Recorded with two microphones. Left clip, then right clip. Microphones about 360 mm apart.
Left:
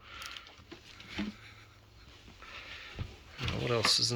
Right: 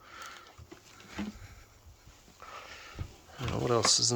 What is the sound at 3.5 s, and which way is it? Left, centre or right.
Speech, centre.